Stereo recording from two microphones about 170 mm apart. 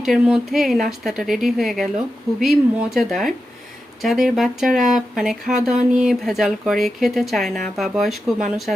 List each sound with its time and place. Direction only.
0.0 s speech: centre (ahead or behind)